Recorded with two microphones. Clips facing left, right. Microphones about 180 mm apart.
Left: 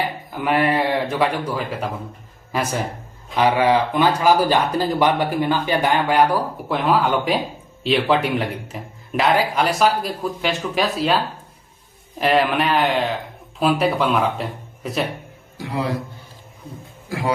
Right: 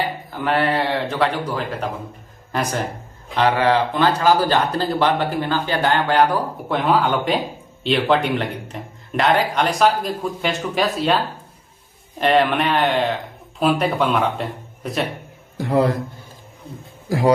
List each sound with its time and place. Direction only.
0.3 s a man's voice: 10° left (ahead or behind)
12.2 s a man's voice: centre (ahead or behind)
15.5 s speech: 55° right (ahead or behind)